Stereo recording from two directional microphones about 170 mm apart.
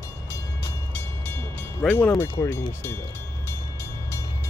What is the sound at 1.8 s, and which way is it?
Speech, 5° left (ahead or behind).